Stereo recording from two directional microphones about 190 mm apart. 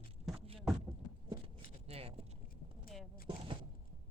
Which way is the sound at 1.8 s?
30° right (ahead or behind).